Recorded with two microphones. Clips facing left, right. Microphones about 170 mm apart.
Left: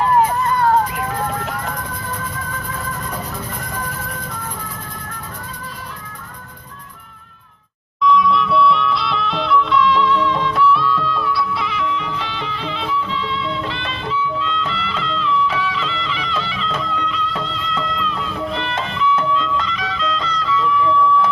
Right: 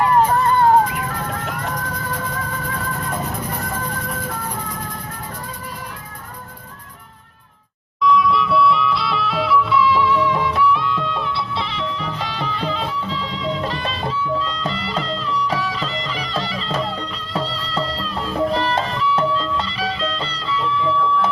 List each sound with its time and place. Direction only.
0.4 s vehicle: 25° right (ahead or behind)
8.0 s music: centre (ahead or behind); by 21.2 s 30° right (ahead or behind)